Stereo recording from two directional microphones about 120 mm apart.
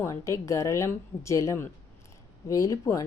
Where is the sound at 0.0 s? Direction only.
25° left (ahead or behind).